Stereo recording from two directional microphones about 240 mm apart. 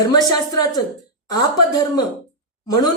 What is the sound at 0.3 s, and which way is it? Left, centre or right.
Speech, centre.